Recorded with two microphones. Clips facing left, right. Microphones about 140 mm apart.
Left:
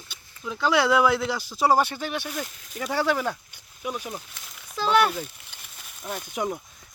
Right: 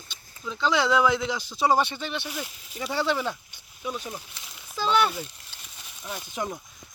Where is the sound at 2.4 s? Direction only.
5° right (ahead or behind).